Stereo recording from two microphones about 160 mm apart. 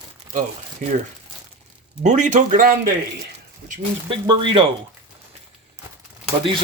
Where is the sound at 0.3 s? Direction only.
50° right (ahead or behind).